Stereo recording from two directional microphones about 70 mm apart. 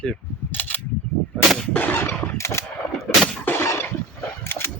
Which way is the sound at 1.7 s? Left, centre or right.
Left.